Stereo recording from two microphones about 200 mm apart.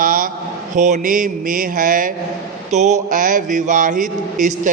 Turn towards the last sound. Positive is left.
turn(degrees=-40)  # may be behind; listen again after turning